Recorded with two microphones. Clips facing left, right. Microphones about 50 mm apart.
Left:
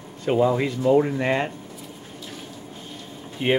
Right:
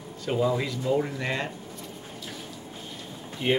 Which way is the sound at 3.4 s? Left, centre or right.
Left.